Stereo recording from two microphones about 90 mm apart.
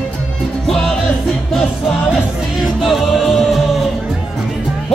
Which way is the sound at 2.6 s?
Centre (ahead or behind).